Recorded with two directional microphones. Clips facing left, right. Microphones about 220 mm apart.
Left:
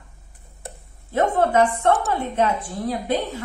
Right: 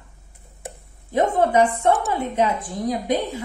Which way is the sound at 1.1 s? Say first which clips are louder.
Right 1 dB; 10° right (ahead or behind).